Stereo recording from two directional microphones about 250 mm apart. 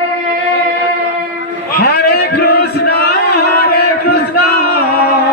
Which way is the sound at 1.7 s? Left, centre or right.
Left.